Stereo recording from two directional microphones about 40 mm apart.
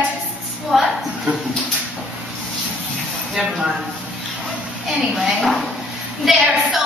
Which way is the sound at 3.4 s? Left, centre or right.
Centre.